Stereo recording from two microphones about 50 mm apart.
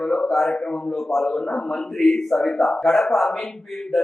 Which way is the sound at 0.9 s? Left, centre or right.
Centre.